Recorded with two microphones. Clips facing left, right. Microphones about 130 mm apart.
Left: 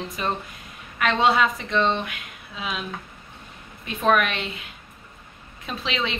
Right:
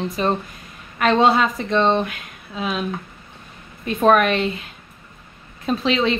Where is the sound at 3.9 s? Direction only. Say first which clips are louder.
Right 6 dB; 40° right (ahead or behind).